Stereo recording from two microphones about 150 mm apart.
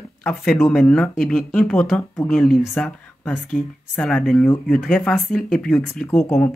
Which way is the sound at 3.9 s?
5° left (ahead or behind).